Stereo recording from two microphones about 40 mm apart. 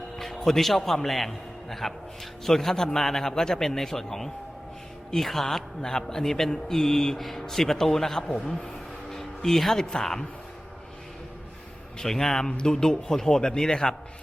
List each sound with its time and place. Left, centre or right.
0.3 s a man's voice: centre
8.4 s a sound: centre
9.8 s a man's voice: centre
11.9 s a man's voice: centre
12.5 s a man's voice: left